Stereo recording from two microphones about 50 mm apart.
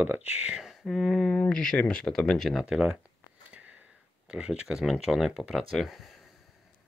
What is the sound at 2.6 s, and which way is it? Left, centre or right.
Speech, centre.